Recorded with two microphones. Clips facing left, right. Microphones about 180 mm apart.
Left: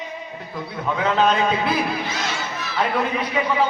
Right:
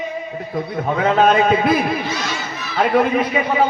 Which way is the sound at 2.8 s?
55° right (ahead or behind).